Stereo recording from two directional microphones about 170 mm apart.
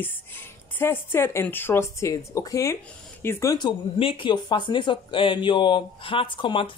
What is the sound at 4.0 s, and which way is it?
Speech, 30° left (ahead or behind).